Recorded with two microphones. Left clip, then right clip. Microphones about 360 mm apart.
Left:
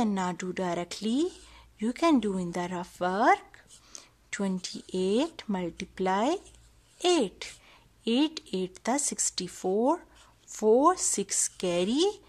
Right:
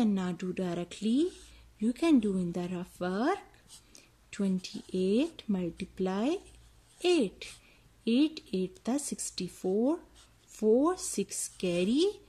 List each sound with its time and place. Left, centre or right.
0.0 s speech: centre
9.6 s speech: left
10.5 s speech: left